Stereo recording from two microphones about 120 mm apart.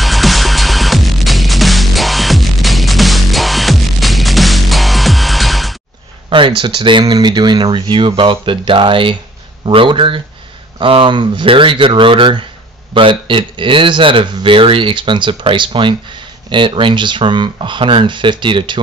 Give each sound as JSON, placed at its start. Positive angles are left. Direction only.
{"t": 0.0, "sound": "music", "side_deg": 0}
{"t": 6.3, "sound": "speech", "side_deg": -45}